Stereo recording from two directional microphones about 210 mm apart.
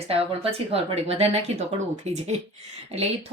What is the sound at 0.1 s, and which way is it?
A woman's voice, 30° right (ahead or behind).